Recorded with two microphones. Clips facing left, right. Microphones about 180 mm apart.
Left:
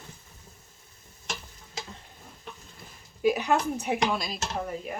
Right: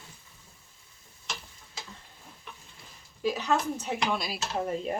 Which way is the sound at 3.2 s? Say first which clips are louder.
Left 3 dB; 15° left (ahead or behind).